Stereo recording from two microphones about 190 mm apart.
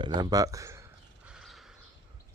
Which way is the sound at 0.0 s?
20° right (ahead or behind).